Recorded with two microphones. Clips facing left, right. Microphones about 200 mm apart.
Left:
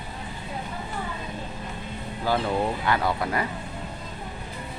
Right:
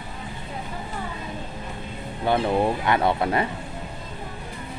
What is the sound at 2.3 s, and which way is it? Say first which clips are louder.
Speech: right 4 dB; 25° right (ahead or behind).